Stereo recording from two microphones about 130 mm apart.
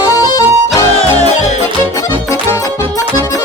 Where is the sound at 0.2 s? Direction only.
30° left (ahead or behind).